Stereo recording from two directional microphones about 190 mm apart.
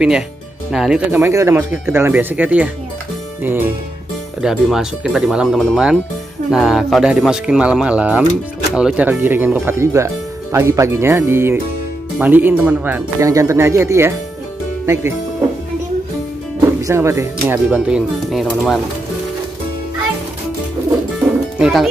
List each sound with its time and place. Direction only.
0.7 s speech: 5° right (ahead or behind)
16.8 s speech: 15° right (ahead or behind); by 18.8 s centre (ahead or behind)
21.5 s speech: 5° right (ahead or behind)